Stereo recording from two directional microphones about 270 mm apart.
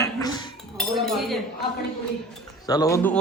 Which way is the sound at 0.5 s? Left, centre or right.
Centre.